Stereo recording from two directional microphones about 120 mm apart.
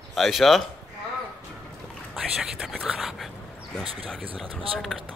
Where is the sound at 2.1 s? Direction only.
5° right (ahead or behind).